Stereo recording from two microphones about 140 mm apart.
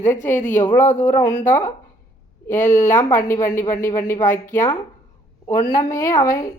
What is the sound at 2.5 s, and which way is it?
Speech, 65° left (ahead or behind).